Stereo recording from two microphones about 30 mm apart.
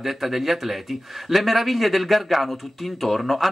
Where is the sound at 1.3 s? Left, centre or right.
Centre.